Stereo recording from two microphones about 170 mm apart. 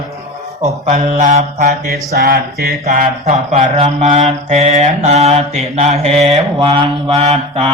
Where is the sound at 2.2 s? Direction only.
65° right (ahead or behind).